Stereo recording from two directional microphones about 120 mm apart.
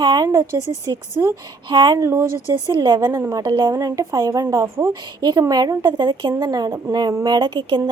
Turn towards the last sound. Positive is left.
turn(degrees=-35)  # may be behind; listen again after turning